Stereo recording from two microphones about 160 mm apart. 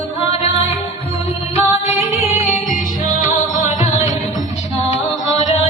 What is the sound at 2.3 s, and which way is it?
Music, 50° left (ahead or behind).